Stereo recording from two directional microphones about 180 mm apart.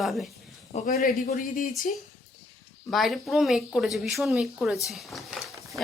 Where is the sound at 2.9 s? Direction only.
Centre (ahead or behind).